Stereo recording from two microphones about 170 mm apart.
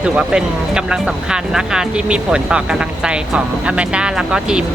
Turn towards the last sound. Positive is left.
turn(degrees=-5)  # may be behind; listen again after turning